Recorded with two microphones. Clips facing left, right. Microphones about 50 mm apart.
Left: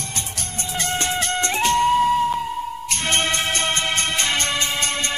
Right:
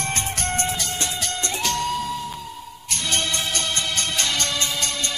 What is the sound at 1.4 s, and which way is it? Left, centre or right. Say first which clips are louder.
Music: left 7 dB; left.